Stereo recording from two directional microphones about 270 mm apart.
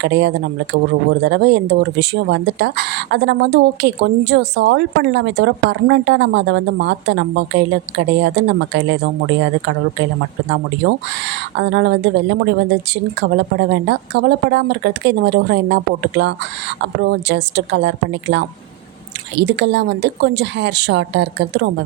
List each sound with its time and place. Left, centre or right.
0.0 s speech: right
10.8 s speech: right